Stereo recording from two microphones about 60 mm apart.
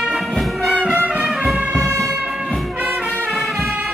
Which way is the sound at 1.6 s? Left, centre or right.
Centre.